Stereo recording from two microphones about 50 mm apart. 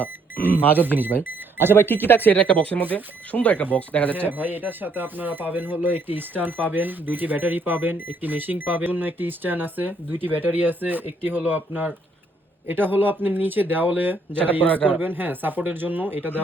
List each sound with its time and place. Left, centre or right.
0.8 s speech: right
1.2 s a sound: right
1.7 s speech: left
2.3 s speech: left
4.1 s speech: right
14.6 s speech: left
15.0 s speech: right